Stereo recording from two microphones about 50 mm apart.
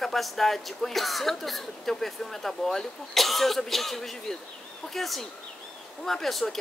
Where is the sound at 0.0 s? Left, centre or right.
Centre.